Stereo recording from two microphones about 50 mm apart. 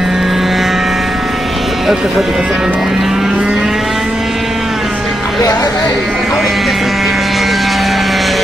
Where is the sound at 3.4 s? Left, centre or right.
Centre.